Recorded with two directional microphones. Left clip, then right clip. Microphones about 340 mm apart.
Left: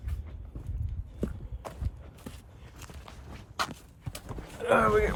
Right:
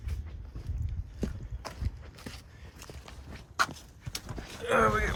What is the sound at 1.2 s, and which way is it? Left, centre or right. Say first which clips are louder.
Clip-clop: left 1 dB; centre.